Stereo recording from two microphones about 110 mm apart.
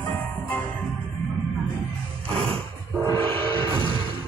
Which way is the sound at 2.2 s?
55° right (ahead or behind).